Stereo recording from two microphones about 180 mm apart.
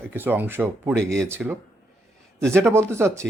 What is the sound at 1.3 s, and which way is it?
Speech, 10° right (ahead or behind).